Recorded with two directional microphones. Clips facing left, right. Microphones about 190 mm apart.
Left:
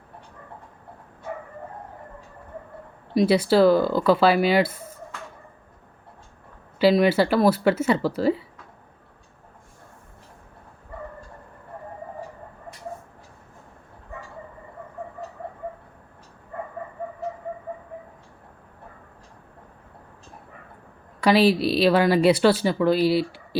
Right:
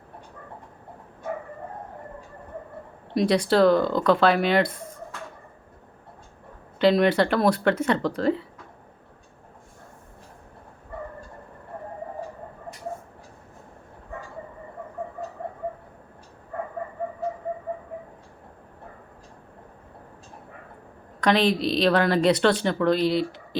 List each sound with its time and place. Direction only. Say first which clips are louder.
3.2 s speech: left 2 dB; 5° left (ahead or behind)
6.7 s speech: left 1 dB; 5° left (ahead or behind)
21.2 s speech: left 3 dB; 5° left (ahead or behind)